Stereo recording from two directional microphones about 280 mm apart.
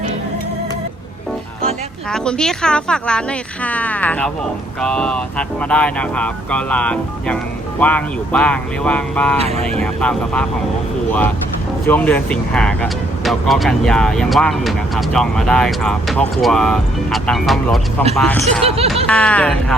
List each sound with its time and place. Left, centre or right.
2.0 s speech: centre
9.4 s speech: right
9.8 s speech: centre
11.9 s speech: centre